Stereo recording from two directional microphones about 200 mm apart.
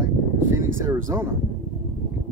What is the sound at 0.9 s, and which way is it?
Speech, 15° right (ahead or behind).